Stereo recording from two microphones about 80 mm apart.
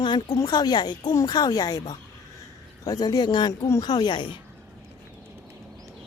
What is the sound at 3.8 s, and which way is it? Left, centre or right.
Speech, left.